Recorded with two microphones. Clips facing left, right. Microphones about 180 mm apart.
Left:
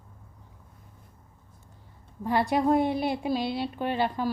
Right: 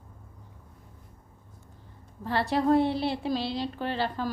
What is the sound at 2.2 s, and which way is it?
A woman's voice, 15° left (ahead or behind).